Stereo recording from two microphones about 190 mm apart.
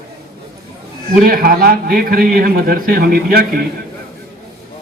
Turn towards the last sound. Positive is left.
turn(degrees=-50)  # may be behind; listen again after turning